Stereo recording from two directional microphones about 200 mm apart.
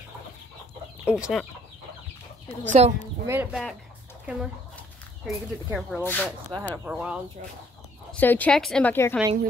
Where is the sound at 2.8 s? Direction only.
30° right (ahead or behind).